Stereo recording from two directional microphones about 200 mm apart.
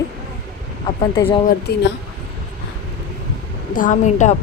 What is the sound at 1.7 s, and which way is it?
Speech, 55° left (ahead or behind).